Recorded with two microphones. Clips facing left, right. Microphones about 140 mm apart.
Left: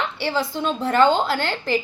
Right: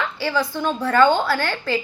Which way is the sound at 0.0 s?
25° left (ahead or behind).